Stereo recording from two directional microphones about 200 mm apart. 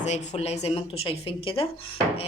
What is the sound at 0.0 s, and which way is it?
Speech, 35° left (ahead or behind).